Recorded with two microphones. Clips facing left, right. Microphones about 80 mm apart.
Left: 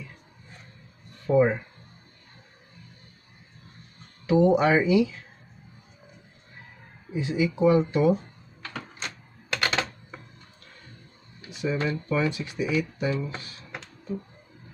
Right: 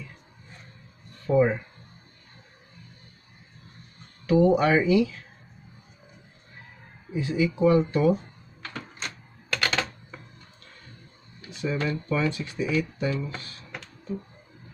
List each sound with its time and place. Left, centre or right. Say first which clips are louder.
1.2 s speech: left 1 dB; centre
4.3 s speech: even; centre
7.2 s speech: even; centre
9.5 s typing: even; centre
11.5 s speech: left 1 dB; centre